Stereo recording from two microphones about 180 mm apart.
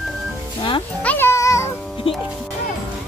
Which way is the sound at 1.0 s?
10° left (ahead or behind).